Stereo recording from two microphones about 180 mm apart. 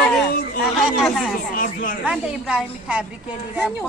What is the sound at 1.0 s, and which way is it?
Speech, centre (ahead or behind).